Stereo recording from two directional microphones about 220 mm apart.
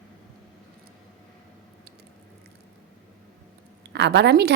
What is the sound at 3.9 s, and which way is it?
Speech, 50° right (ahead or behind).